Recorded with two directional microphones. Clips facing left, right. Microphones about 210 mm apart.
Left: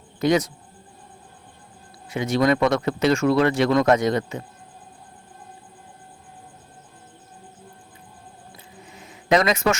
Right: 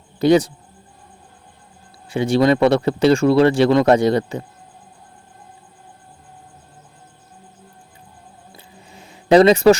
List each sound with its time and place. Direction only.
0.2 s speech: 30° right (ahead or behind)
2.0 s speech: 30° right (ahead or behind)
8.5 s a sound: 30° right (ahead or behind)